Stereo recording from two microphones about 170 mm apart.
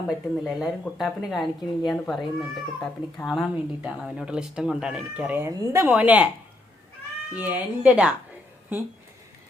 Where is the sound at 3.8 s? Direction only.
Centre (ahead or behind).